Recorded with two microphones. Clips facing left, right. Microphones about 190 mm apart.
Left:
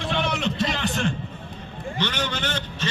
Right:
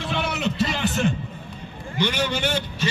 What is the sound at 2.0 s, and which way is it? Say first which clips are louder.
Vehicle: right 5 dB; 10° right (ahead or behind).